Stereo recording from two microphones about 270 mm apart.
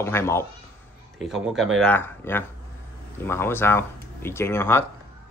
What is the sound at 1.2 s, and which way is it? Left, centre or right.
Speech, centre.